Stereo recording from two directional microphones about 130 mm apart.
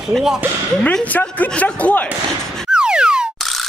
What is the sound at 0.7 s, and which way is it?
Speech, 10° left (ahead or behind).